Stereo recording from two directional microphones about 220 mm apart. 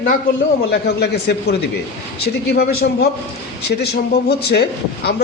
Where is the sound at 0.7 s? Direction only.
50° left (ahead or behind).